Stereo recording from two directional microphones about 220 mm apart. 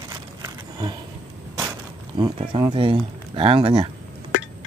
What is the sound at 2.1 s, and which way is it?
Speech, 20° right (ahead or behind).